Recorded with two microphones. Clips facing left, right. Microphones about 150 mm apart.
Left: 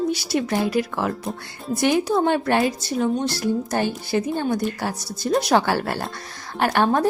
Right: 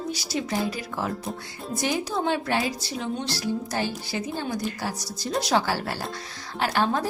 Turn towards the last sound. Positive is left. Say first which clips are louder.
# left 5 dB
turn(degrees=55)  # may be behind; listen again after turning